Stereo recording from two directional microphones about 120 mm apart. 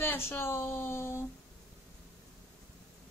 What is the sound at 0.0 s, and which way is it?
Speech, 20° left (ahead or behind).